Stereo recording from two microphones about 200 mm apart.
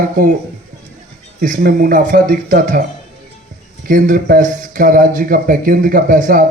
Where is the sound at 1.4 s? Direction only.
45° right (ahead or behind).